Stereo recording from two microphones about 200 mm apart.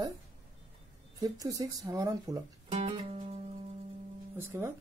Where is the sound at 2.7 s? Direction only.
30° right (ahead or behind).